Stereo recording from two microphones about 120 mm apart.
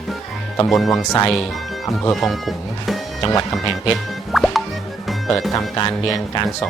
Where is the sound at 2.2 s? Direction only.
Centre (ahead or behind).